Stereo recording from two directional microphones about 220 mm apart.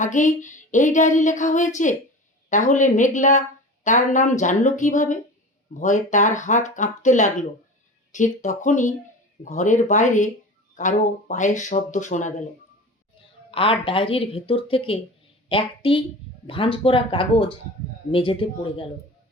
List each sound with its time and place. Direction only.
0.0 s speech: 35° left (ahead or behind)
13.5 s speech: 25° left (ahead or behind)